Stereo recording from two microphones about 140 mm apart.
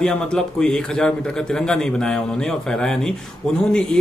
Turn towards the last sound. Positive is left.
turn(degrees=5)  # may be behind; listen again after turning